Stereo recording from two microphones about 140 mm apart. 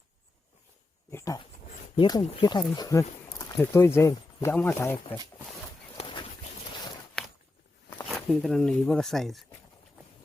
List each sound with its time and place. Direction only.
1.1 s speech: 20° left (ahead or behind)
3.6 s speech: 15° left (ahead or behind)
6.0 s a sound: 35° left (ahead or behind)
7.2 s walk: 5° left (ahead or behind)
8.0 s speech: centre (ahead or behind)